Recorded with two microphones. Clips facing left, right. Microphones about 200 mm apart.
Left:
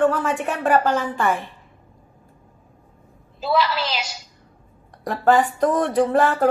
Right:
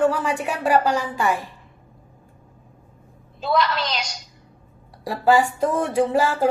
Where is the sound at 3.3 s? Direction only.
5° left (ahead or behind).